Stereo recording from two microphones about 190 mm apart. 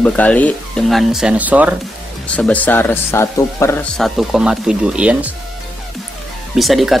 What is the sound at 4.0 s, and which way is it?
Speech, centre (ahead or behind).